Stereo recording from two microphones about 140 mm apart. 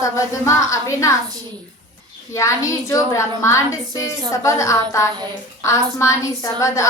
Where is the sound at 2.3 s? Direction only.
20° left (ahead or behind).